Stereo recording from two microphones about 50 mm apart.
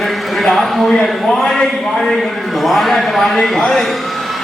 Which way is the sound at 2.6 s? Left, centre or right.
Centre.